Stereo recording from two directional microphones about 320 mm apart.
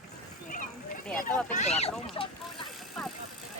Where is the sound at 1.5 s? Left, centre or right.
Left.